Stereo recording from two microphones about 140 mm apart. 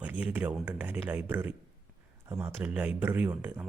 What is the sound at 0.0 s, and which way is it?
Speech, 10° right (ahead or behind).